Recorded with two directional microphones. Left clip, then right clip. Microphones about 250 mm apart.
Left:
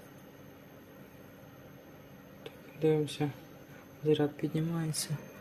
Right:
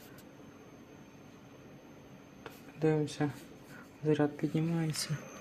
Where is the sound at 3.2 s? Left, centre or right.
Centre.